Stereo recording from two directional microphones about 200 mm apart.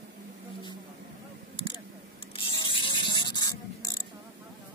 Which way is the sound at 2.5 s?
25° left (ahead or behind).